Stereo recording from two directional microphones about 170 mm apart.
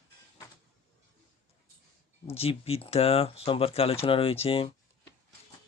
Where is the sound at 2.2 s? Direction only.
35° left (ahead or behind).